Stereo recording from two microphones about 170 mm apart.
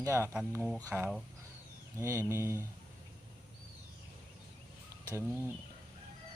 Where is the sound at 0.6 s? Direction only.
5° left (ahead or behind).